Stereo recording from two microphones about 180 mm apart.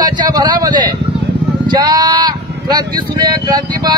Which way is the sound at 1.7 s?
20° right (ahead or behind).